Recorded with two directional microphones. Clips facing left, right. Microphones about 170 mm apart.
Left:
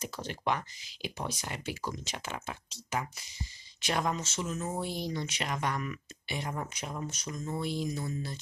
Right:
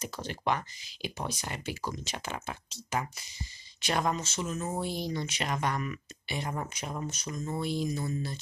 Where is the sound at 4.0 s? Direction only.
20° right (ahead or behind).